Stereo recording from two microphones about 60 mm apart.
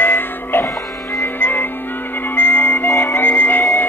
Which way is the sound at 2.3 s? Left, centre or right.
Left.